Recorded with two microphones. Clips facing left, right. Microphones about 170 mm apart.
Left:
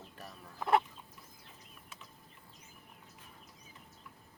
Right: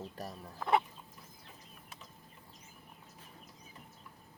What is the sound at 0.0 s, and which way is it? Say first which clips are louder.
Speech: right 7 dB; 40° right (ahead or behind).